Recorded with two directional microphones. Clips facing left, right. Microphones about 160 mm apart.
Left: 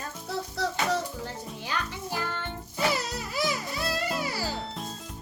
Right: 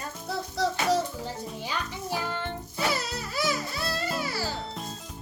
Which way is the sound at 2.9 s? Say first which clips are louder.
Left 1 dB; 15° left (ahead or behind).